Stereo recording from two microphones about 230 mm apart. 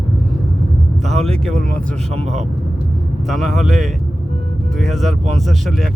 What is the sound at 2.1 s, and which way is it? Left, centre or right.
Speech, right.